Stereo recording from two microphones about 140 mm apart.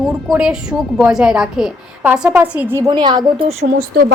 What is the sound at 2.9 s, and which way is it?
Speech, 30° right (ahead or behind).